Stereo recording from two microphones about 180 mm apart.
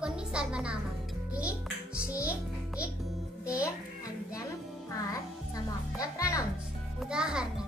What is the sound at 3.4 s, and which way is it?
Music, 5° right (ahead or behind).